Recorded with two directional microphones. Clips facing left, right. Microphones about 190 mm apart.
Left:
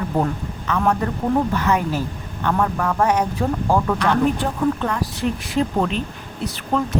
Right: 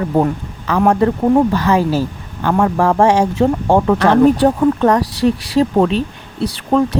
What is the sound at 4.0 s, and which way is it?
Speech, 75° right (ahead or behind).